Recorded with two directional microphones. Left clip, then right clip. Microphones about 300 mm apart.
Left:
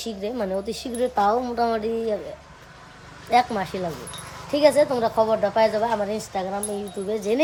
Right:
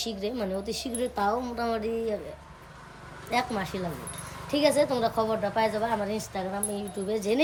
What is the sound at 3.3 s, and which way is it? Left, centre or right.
Speech, centre.